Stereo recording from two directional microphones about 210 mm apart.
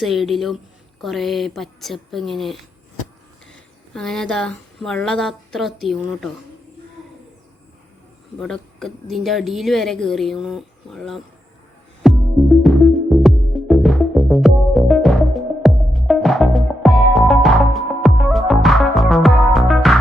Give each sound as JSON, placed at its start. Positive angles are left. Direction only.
{"t": 0.0, "sound": "a woman's voice", "side_deg": 0}
{"t": 3.9, "sound": "a woman's voice", "side_deg": 5}
{"t": 8.4, "sound": "a woman's voice", "side_deg": 0}
{"t": 12.0, "sound": "music", "side_deg": 0}